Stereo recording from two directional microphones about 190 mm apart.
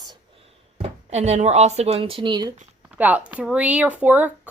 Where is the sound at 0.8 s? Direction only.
35° right (ahead or behind).